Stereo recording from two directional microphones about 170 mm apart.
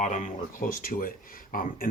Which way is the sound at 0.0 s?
45° left (ahead or behind).